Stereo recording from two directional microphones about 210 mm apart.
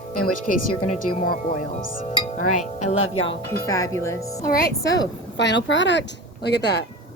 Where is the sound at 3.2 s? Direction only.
15° left (ahead or behind).